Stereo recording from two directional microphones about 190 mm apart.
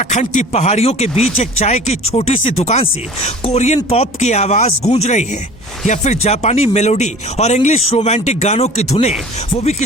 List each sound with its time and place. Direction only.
0.0 s speech: 40° left (ahead or behind)